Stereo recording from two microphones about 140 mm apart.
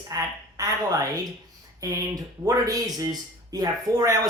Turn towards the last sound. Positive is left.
turn(degrees=-25)  # may be behind; listen again after turning